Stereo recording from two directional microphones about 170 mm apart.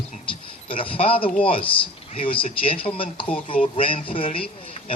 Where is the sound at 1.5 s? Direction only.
30° left (ahead or behind).